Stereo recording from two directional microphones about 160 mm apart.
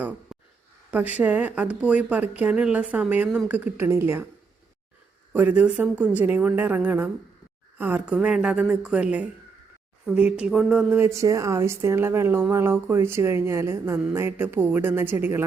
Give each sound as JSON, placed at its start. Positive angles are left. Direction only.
{"t": 0.9, "sound": "speech", "side_deg": -10}
{"t": 5.3, "sound": "speech", "side_deg": -10}